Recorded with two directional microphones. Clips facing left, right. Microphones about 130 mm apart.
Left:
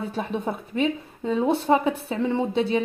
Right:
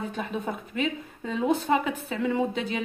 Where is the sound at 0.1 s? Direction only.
35° left (ahead or behind).